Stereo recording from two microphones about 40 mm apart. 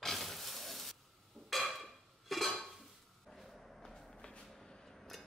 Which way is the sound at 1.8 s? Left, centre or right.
Centre.